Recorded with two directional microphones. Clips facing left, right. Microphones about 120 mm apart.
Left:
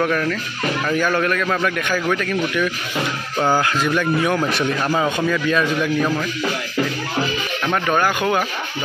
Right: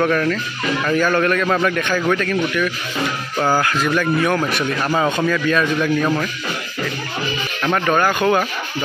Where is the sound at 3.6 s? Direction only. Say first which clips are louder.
Right 1 dB; 15° left (ahead or behind).